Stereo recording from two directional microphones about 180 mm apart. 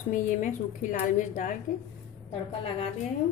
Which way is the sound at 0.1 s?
45° left (ahead or behind).